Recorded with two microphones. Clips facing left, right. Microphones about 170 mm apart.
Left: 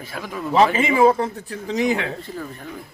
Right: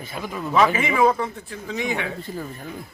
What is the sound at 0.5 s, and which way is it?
Speech, 30° left (ahead or behind).